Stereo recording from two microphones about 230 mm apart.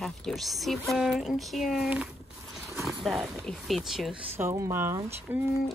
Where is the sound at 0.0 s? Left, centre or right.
Centre.